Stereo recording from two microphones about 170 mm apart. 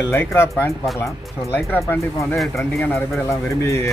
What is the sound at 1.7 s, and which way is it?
Speech, 15° left (ahead or behind).